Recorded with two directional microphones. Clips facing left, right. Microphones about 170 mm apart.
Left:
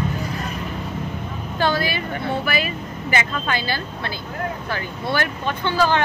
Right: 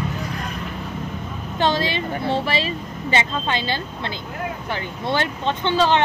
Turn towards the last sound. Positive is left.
turn(degrees=-20)  # may be behind; listen again after turning